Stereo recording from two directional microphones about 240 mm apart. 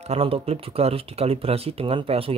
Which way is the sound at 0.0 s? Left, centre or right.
Right.